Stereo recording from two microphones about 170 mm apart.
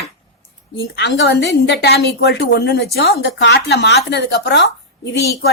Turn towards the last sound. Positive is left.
turn(degrees=80)